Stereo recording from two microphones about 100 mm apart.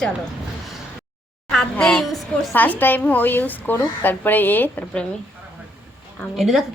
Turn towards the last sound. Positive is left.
turn(degrees=0)  # may be behind; listen again after turning